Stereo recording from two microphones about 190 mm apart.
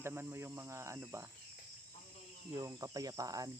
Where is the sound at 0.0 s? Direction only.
10° right (ahead or behind).